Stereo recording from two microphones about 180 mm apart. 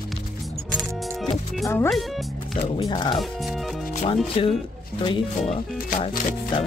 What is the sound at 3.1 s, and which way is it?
Speech, centre (ahead or behind).